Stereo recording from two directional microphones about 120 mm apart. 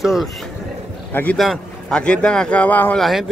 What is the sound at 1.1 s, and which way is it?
Speech, 15° left (ahead or behind).